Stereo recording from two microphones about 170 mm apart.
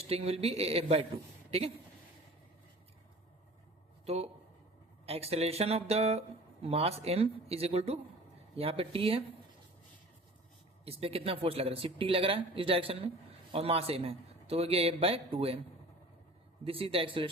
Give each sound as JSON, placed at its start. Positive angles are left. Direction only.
{"t": 0.1, "sound": "speech", "side_deg": -35}
{"t": 4.0, "sound": "speech", "side_deg": -40}
{"t": 10.8, "sound": "speech", "side_deg": -35}
{"t": 16.6, "sound": "speech", "side_deg": -35}